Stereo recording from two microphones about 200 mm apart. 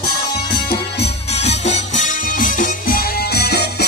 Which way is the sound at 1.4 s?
35° left (ahead or behind).